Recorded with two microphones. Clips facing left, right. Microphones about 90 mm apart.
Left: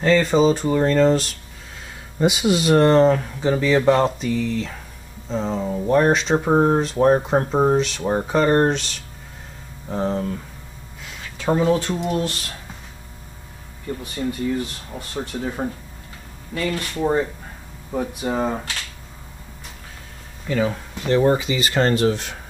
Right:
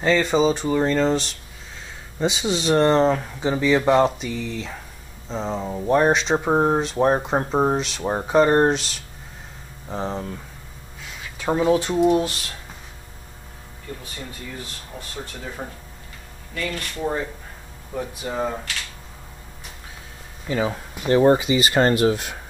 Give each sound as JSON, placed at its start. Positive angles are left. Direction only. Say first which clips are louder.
{"t": 0.0, "sound": "speech", "louder": "left 2 dB", "side_deg": 0}
{"t": 9.8, "sound": "speech", "louder": "left 4 dB", "side_deg": 0}
{"t": 11.3, "sound": "speech", "louder": "left 1 dB", "side_deg": -5}
{"t": 15.1, "sound": "speech", "louder": "left 8 dB", "side_deg": 25}
{"t": 16.7, "sound": "speech", "louder": "left 3 dB", "side_deg": 30}
{"t": 17.9, "sound": "speech", "louder": "left 4 dB", "side_deg": 10}
{"t": 20.4, "sound": "speech", "louder": "left 2 dB", "side_deg": -20}